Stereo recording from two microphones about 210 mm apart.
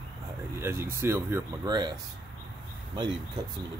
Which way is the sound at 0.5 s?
10° right (ahead or behind).